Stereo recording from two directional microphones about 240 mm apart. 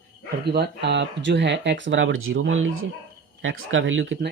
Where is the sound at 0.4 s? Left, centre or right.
Right.